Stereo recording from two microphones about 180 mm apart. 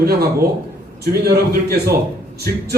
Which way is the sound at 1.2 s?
60° right (ahead or behind).